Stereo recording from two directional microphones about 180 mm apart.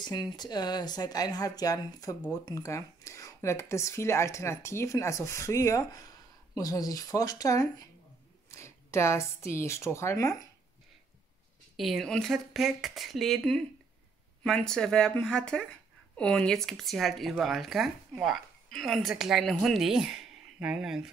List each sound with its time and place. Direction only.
0.0 s speech: 25° left (ahead or behind)
11.7 s speech: centre (ahead or behind)